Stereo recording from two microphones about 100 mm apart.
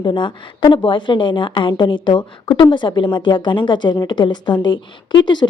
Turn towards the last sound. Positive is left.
turn(degrees=50)  # may be behind; listen again after turning